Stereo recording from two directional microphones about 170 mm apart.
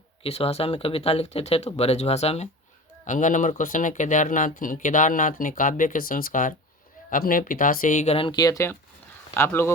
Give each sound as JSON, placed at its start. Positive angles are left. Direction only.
{"t": 0.2, "sound": "speech", "side_deg": 35}